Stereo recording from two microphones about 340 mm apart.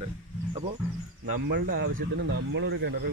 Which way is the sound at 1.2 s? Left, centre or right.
Right.